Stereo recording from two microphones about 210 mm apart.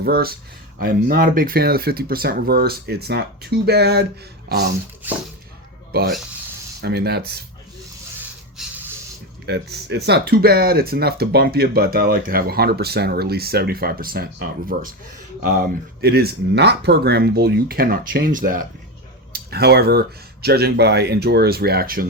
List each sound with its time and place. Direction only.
0.0 s speech: 45° right (ahead or behind)
5.0 s speech: 10° right (ahead or behind)
5.9 s speech: 50° right (ahead or behind)
8.6 s spray: centre (ahead or behind)
9.5 s speech: 50° right (ahead or behind)